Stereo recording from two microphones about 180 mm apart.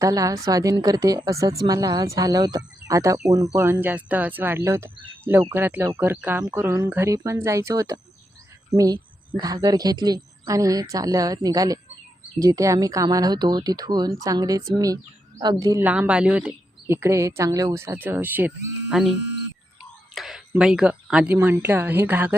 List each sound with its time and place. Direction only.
0.0 s a woman's voice: 20° right (ahead or behind)
19.8 s a sound: centre (ahead or behind)
20.5 s speech: 5° right (ahead or behind)